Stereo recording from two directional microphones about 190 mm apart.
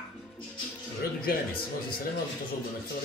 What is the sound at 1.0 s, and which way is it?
Speech, 50° left (ahead or behind).